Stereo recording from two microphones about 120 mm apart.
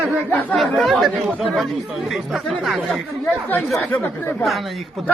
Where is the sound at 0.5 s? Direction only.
Centre (ahead or behind).